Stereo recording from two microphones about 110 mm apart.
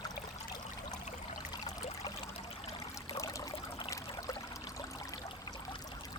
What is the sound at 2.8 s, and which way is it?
Trickle, 30° left (ahead or behind).